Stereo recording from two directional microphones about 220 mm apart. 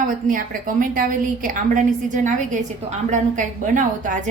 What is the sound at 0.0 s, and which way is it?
A woman's voice, 40° right (ahead or behind).